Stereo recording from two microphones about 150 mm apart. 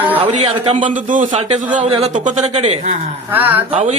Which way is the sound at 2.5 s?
45° right (ahead or behind).